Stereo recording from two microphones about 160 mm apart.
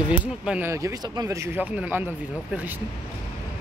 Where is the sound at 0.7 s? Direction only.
20° right (ahead or behind).